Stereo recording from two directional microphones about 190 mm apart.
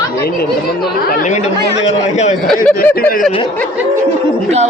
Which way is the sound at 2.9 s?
50° left (ahead or behind).